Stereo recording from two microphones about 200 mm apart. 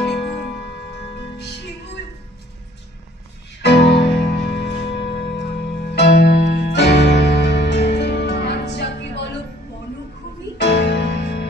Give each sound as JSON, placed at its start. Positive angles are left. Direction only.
{"t": 0.0, "sound": "music", "side_deg": 0}
{"t": 3.6, "sound": "music", "side_deg": 55}
{"t": 10.6, "sound": "music", "side_deg": 55}